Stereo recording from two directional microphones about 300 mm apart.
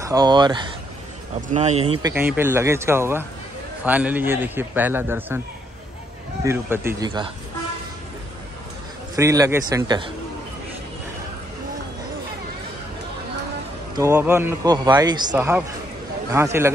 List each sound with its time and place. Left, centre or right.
0.0 s a man's voice: centre
2.0 s a man's voice: centre
6.4 s a man's voice: centre
9.1 s a man's voice: centre
13.9 s a man's voice: centre